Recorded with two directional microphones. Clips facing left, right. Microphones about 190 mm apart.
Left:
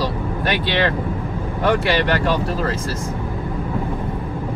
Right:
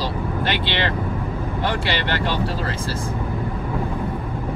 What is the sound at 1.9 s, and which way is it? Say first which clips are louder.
Speech: left 5 dB; 30° right (ahead or behind).